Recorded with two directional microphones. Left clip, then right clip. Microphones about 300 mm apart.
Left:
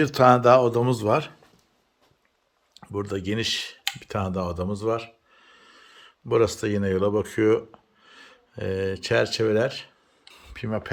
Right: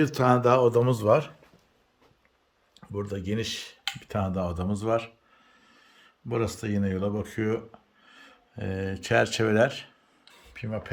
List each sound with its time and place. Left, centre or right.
0.0 s speech: centre
2.7 s speech: centre
10.4 s a sound: centre